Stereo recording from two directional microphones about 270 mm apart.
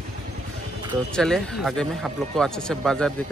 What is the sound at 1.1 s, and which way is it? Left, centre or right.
Speech, centre.